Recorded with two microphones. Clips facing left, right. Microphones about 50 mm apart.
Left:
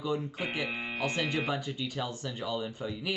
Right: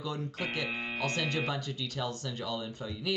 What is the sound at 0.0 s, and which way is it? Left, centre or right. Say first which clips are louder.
Speech: left 3 dB; centre.